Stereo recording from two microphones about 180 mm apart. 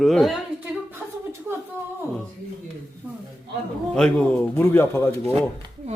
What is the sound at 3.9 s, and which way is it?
A man's voice, 5° left (ahead or behind).